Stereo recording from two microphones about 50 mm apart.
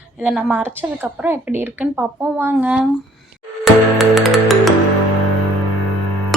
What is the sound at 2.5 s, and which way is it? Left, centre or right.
Speech, right.